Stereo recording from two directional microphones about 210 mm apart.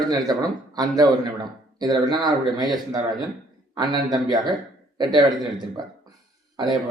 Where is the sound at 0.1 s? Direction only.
20° right (ahead or behind).